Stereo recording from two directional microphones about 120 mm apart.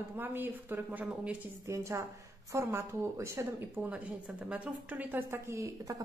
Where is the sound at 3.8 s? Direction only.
10° right (ahead or behind).